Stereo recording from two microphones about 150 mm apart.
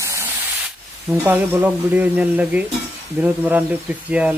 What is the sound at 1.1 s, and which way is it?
Speech, 10° right (ahead or behind).